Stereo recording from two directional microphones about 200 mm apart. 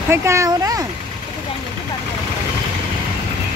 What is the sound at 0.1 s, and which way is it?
Speech, 15° right (ahead or behind).